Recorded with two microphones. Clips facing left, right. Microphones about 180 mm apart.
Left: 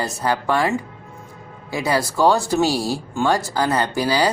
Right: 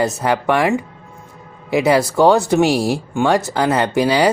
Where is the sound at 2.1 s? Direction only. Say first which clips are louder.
Right 3 dB; 65° right (ahead or behind).